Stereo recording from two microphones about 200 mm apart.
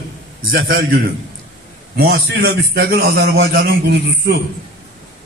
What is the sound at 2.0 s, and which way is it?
A man's voice, 55° right (ahead or behind).